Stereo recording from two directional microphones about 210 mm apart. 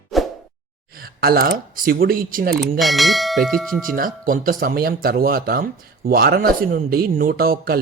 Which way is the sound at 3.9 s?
40° right (ahead or behind).